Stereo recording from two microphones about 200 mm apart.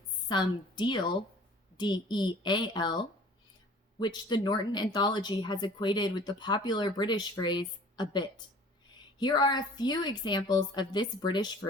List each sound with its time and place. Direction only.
0.3 s speech: 20° left (ahead or behind)